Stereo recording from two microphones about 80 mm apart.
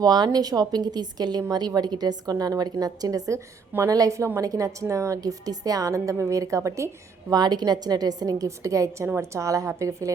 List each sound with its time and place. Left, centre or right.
0.0 s a woman's voice: right
7.3 s a woman's voice: right